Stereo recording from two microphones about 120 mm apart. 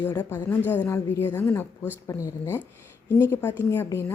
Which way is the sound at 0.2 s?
15° left (ahead or behind).